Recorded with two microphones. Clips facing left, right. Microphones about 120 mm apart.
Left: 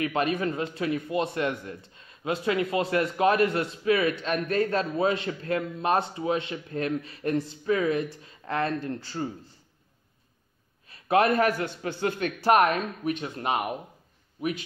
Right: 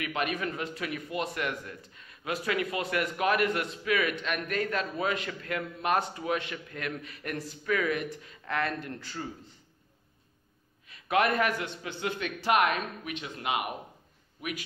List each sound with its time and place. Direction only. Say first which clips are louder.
0.0 s speech: left 6 dB; 35° left (ahead or behind)
10.9 s a man's voice: left 4 dB; 35° left (ahead or behind)